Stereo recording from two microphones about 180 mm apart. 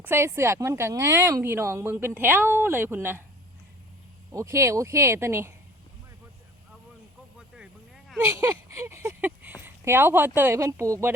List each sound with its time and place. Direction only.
0.0 s speech: 15° right (ahead or behind)
4.3 s speech: 15° right (ahead or behind)
7.3 s a sound: 5° right (ahead or behind)
8.4 s speech: 15° right (ahead or behind)